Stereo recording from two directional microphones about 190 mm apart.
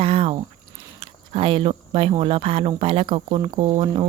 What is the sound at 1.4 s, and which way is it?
Speech, 25° right (ahead or behind).